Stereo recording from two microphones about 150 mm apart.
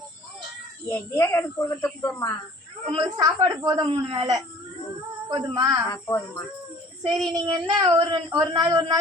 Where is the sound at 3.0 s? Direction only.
25° right (ahead or behind).